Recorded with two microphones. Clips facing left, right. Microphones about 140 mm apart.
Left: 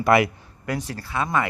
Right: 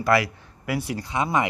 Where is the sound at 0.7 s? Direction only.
10° right (ahead or behind).